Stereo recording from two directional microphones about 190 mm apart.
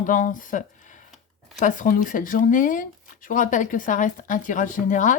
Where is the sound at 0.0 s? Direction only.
45° left (ahead or behind).